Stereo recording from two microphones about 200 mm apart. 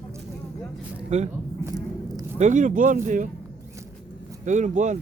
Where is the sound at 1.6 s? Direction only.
15° right (ahead or behind).